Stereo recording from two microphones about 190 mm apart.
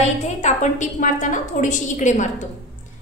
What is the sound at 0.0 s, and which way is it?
A woman's voice, 35° left (ahead or behind).